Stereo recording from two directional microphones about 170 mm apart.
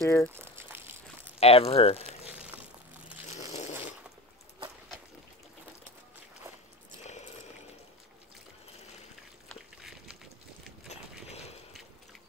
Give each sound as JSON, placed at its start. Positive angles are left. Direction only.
{"t": 0.0, "sound": "speech", "side_deg": 15}
{"t": 0.3, "sound": "crumpling", "side_deg": -15}
{"t": 1.4, "sound": "speech", "side_deg": 35}
{"t": 3.3, "sound": "dog", "side_deg": 40}
{"t": 9.5, "sound": "a sound", "side_deg": 0}
{"t": 10.9, "sound": "a sound", "side_deg": 40}